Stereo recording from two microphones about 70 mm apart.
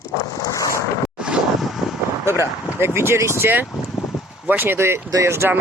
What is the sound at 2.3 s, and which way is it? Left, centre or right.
Speech, right.